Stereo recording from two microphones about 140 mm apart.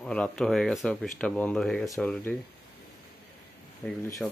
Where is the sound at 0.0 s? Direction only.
5° left (ahead or behind).